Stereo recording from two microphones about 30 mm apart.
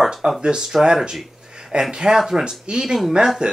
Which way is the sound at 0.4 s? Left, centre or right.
Right.